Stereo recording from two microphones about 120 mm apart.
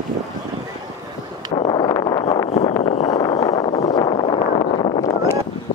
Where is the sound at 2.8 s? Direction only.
60° left (ahead or behind).